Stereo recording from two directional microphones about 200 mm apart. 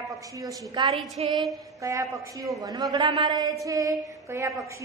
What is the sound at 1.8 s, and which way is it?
A woman's voice, 15° right (ahead or behind).